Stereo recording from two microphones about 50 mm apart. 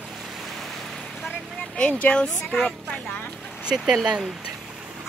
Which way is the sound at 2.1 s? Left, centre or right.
Centre.